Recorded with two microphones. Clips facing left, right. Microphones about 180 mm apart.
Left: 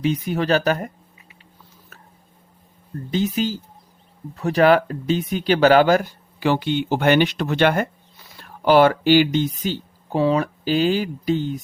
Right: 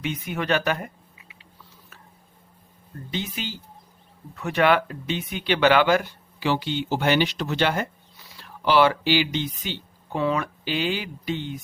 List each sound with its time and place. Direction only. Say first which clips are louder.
0.0 s speech: left 7 dB; 35° left (ahead or behind)
3.1 s speech: left 10 dB; 40° left (ahead or behind)